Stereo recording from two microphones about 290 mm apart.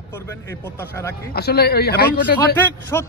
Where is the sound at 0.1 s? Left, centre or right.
Centre.